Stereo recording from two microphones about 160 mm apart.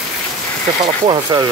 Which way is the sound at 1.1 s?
25° right (ahead or behind).